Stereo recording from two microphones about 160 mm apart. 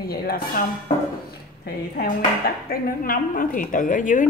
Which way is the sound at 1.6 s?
70° left (ahead or behind).